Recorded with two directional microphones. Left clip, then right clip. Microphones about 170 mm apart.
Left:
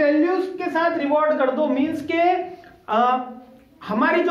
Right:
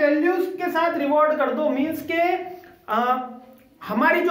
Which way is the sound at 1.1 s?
15° right (ahead or behind).